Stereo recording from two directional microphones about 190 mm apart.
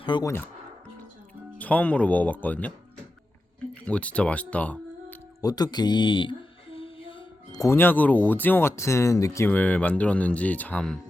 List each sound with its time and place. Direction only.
0.0 s speech: 25° left (ahead or behind)
1.5 s speech: 10° left (ahead or behind)
3.8 s speech: 5° left (ahead or behind)
5.4 s speech: 20° left (ahead or behind); by 11.0 s 5° left (ahead or behind)